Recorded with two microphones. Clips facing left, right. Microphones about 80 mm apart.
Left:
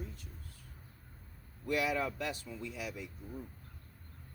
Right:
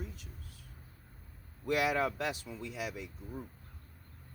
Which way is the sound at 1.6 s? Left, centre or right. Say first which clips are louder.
Right 3 dB; right.